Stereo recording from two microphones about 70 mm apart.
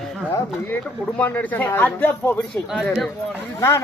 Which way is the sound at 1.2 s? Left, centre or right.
Left.